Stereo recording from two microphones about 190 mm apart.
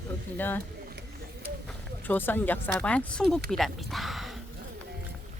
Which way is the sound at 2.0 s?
10° left (ahead or behind).